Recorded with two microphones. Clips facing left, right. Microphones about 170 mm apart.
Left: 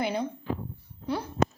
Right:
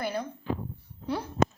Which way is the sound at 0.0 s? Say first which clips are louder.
Left 3 dB; 20° left (ahead or behind).